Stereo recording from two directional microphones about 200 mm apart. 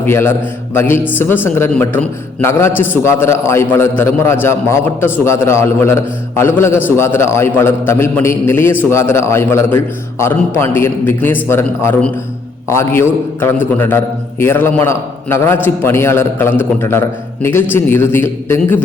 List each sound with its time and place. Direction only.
0.0 s a man's voice: 10° left (ahead or behind)